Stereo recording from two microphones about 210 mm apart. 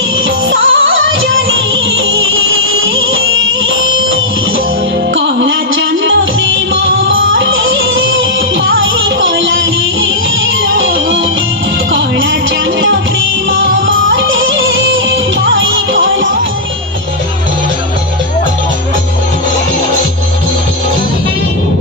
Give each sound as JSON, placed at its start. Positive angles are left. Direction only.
{"t": 0.5, "sound": "music", "side_deg": -70}
{"t": 13.5, "sound": "music", "side_deg": -65}